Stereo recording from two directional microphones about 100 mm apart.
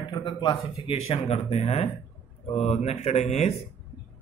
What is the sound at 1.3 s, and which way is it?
Speech, 90° left.